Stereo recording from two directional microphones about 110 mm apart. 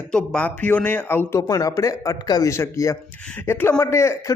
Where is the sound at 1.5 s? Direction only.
30° left (ahead or behind).